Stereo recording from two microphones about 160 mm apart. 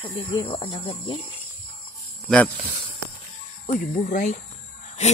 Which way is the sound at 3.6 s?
45° left (ahead or behind).